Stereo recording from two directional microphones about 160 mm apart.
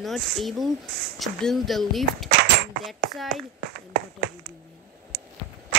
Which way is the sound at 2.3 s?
85° right.